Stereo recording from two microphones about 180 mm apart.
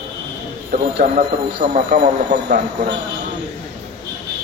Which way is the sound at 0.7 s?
50° right (ahead or behind).